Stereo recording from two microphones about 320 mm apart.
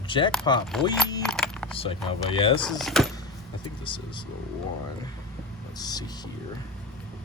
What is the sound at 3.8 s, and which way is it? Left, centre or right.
Speech, centre.